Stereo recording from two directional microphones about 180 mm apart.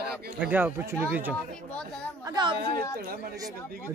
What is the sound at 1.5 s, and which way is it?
Speech, 5° left (ahead or behind).